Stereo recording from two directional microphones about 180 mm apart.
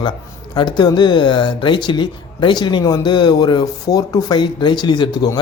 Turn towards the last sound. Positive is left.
turn(degrees=25)  # may be behind; listen again after turning